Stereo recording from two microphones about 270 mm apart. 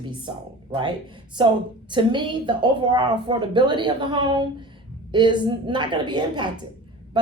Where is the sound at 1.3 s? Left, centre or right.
Centre.